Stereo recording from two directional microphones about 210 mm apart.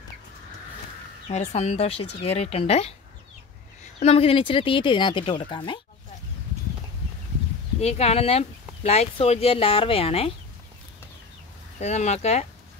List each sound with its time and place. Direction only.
1.3 s speech: 30° left (ahead or behind)
4.0 s speech: 30° left (ahead or behind)
7.8 s speech: 30° left (ahead or behind)
11.8 s speech: 35° left (ahead or behind)